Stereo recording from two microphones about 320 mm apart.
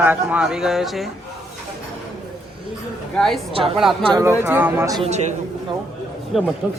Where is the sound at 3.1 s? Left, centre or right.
Centre.